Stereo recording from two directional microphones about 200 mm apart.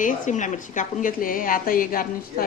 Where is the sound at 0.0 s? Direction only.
40° left (ahead or behind).